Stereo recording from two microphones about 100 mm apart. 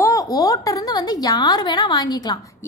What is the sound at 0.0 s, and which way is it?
A woman's voice, 35° left (ahead or behind).